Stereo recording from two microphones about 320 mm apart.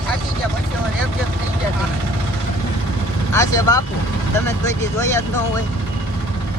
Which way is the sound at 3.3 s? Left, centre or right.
Centre.